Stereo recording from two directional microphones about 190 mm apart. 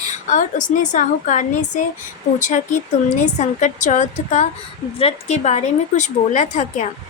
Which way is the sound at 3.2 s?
40° left (ahead or behind).